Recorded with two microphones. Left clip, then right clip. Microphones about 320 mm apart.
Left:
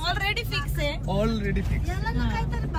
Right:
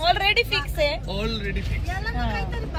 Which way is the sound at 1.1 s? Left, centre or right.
Centre.